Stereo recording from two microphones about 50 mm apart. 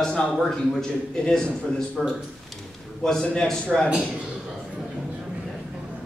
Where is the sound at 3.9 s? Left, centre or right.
Centre.